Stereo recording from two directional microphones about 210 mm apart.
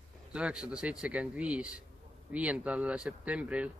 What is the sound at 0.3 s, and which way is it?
Speech, 5° right (ahead or behind).